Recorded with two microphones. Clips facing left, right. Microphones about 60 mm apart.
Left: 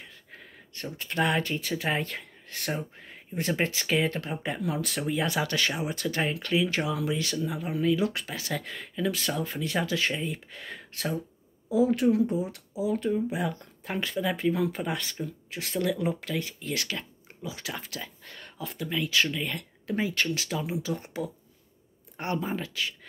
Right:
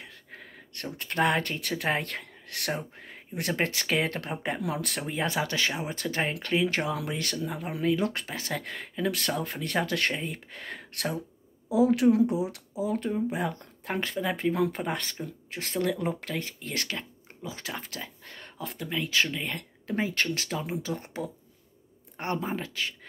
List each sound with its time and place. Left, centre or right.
0.0 s a sound: right
1.2 s speech: right
5.0 s speech: right
6.7 s speech: right
11.7 s speech: right
12.7 s speech: right